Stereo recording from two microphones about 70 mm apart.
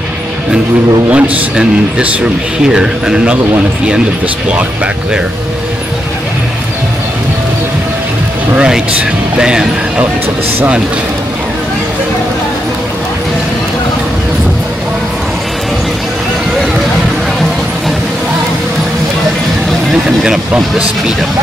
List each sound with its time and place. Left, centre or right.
1.1 s a man's voice: right
2.6 s speech: centre
8.5 s vehicle: centre
9.4 s speech: centre
19.9 s speech: centre